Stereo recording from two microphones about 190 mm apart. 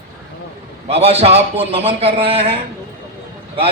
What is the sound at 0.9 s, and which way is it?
A man's voice, 30° right (ahead or behind).